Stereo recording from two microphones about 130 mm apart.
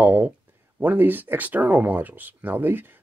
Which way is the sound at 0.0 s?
10° right (ahead or behind).